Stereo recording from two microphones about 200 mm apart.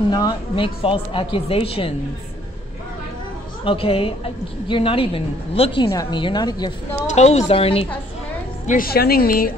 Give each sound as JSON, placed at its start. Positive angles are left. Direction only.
{"t": 0.1, "sound": "a woman's voice", "side_deg": 25}
{"t": 3.6, "sound": "a woman's voice", "side_deg": 30}
{"t": 7.2, "sound": "a woman's voice", "side_deg": 35}
{"t": 8.6, "sound": "a woman's voice", "side_deg": 45}